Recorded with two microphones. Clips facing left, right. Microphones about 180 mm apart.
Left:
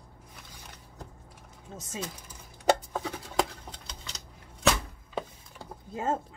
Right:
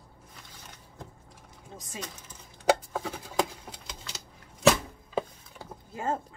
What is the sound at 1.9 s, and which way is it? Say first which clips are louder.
Speech: left 3 dB; 10° left (ahead or behind).